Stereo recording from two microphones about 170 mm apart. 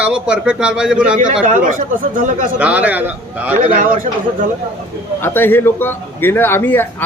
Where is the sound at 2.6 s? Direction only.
10° right (ahead or behind).